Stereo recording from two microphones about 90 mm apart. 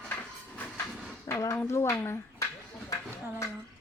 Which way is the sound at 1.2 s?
35° left (ahead or behind).